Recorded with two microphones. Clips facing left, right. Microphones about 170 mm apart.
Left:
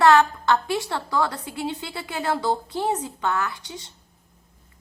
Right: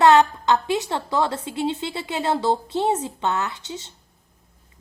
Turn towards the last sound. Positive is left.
turn(degrees=-25)  # may be behind; listen again after turning